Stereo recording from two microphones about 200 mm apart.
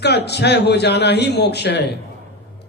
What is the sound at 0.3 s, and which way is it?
A man's voice, 55° left (ahead or behind).